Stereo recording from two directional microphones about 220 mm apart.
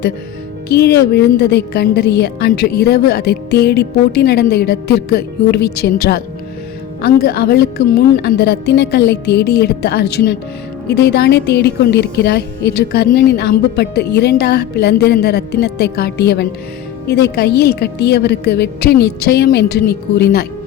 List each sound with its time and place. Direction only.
0.7 s a woman's voice: 50° left (ahead or behind)